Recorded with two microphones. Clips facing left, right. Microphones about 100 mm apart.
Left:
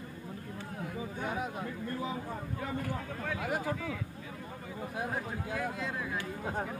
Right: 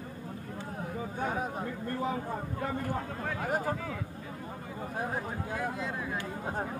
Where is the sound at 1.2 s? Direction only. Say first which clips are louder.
Right 3 dB; 40° right (ahead or behind).